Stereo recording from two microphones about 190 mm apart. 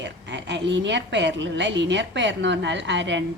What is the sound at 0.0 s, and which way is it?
A woman's voice, 70° right (ahead or behind).